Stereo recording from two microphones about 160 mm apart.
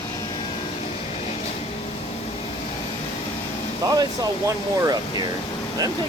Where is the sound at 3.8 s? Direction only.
20° right (ahead or behind).